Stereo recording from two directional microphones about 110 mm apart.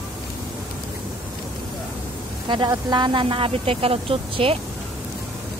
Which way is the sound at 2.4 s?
45° right (ahead or behind).